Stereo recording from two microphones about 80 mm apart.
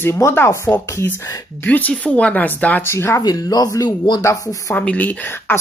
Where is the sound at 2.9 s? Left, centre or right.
Left.